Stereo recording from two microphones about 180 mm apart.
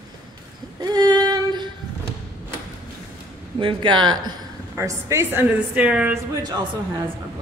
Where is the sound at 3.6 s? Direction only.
25° right (ahead or behind); by 6.1 s 5° right (ahead or behind).